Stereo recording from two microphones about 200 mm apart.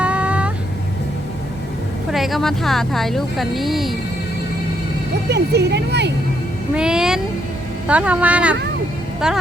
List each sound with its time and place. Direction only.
0.0 s vehicle: 5° right (ahead or behind)
2.0 s speech: centre (ahead or behind)
5.3 s speech: 55° right (ahead or behind)
6.7 s speech: 5° right (ahead or behind)